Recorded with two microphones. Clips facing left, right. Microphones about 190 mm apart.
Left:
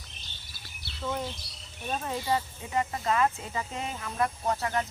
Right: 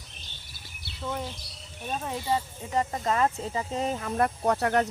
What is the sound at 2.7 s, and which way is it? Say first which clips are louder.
Speech: right 1 dB; 40° right (ahead or behind).